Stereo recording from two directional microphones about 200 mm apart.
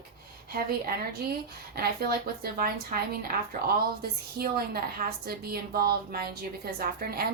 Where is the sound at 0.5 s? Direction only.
50° right (ahead or behind).